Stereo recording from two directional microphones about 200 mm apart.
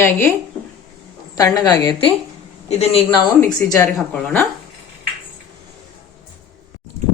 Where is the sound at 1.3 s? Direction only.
15° left (ahead or behind).